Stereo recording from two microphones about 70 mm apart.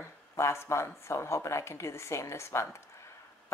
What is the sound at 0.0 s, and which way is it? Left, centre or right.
Speech, left.